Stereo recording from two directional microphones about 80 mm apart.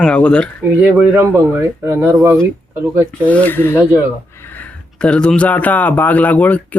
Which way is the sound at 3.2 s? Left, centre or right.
Centre.